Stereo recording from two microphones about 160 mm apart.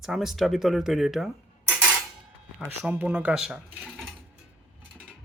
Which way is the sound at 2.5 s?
10° right (ahead or behind).